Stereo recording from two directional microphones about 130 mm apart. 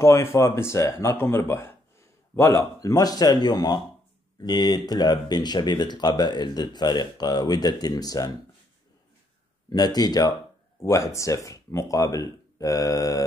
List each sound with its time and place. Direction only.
0.0 s speech: 20° left (ahead or behind)
9.7 s speech: 30° left (ahead or behind)